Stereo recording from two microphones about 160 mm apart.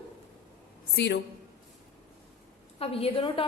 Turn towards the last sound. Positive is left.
turn(degrees=35)  # may be behind; listen again after turning